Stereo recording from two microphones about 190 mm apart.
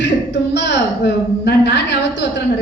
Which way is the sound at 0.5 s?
65° left (ahead or behind).